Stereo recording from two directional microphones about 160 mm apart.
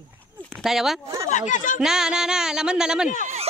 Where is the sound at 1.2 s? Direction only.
50° left (ahead or behind).